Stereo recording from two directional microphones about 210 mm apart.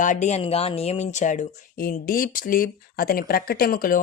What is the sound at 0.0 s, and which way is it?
Speech, 35° left (ahead or behind).